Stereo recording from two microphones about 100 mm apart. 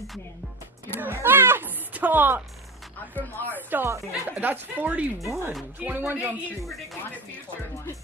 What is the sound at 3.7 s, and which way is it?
A woman's voice, 20° right (ahead or behind).